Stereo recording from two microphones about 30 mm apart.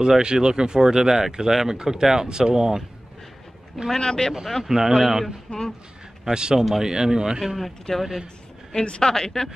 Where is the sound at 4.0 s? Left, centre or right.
Left.